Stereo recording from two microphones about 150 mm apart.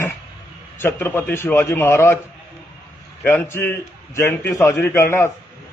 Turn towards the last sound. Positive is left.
turn(degrees=15)  # may be behind; listen again after turning